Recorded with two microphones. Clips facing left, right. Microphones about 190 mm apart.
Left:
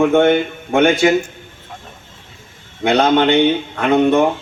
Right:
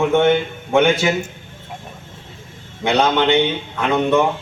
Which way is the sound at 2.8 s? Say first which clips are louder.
Left 3 dB; 55° left (ahead or behind).